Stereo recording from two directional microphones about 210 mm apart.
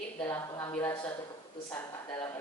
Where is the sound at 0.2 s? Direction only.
15° left (ahead or behind).